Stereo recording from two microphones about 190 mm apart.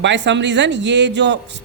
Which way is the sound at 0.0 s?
70° right (ahead or behind).